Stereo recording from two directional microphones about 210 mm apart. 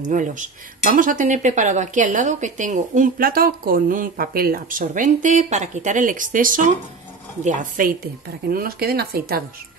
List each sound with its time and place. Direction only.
0.0 s speech: 40° right (ahead or behind)